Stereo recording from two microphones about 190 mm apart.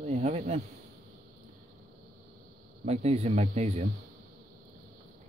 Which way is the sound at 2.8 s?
35° right (ahead or behind).